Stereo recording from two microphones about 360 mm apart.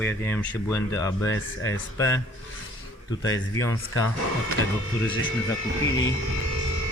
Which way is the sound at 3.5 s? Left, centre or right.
Left.